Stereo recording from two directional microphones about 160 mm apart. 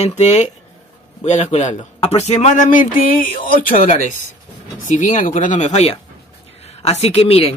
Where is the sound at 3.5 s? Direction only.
60° left (ahead or behind).